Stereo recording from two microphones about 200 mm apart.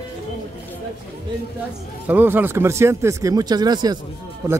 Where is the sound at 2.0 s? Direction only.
10° right (ahead or behind).